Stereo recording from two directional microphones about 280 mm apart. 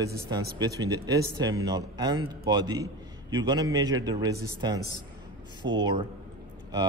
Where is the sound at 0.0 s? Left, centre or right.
Centre.